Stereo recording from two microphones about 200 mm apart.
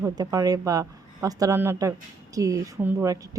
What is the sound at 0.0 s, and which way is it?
A woman's voice, 20° right (ahead or behind).